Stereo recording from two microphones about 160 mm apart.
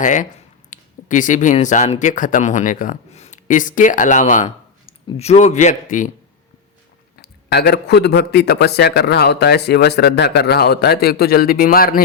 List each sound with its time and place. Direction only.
0.0 s speech: 55° left (ahead or behind)
4.4 s speech: 30° left (ahead or behind); by 6.1 s 50° left (ahead or behind)
7.2 s a man's voice: 90° left; by 12.0 s 65° left (ahead or behind)